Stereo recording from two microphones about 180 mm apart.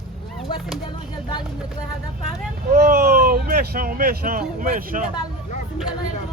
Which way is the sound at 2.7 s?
55° right (ahead or behind).